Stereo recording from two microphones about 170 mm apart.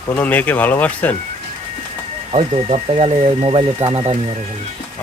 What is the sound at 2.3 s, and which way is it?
Speech, 40° right (ahead or behind).